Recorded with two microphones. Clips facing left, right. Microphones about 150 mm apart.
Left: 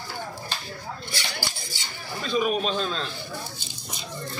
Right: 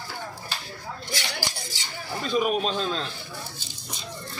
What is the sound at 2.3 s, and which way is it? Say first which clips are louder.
Speech: even; 5° right (ahead or behind).